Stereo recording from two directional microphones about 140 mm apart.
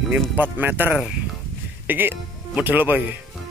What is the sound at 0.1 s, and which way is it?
Speech, 15° right (ahead or behind).